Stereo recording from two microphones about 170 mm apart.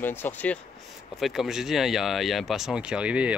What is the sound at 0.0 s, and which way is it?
Speech, 10° left (ahead or behind).